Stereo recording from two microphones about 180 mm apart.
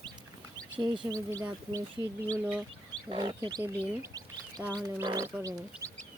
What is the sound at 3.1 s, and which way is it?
Speech, 25° right (ahead or behind).